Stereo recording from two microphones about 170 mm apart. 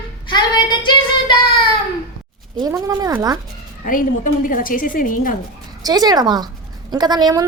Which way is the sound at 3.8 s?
55° left (ahead or behind).